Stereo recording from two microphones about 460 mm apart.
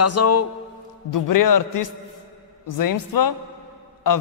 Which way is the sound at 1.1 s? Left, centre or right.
Left.